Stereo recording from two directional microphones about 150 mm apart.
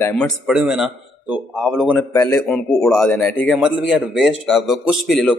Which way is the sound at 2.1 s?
15° left (ahead or behind).